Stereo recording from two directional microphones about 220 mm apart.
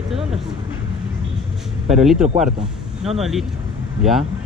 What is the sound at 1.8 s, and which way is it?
Speech, centre (ahead or behind).